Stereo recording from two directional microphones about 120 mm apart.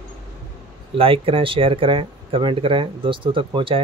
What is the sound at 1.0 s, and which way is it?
Speech, 50° right (ahead or behind).